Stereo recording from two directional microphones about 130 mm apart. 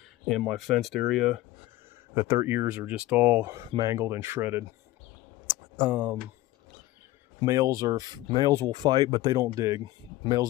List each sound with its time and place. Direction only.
0.4 s speech: centre (ahead or behind)
2.1 s speech: 20° right (ahead or behind)
3.7 s speech: 20° right (ahead or behind)
5.8 s speech: 10° right (ahead or behind)
7.3 s speech: 25° right (ahead or behind)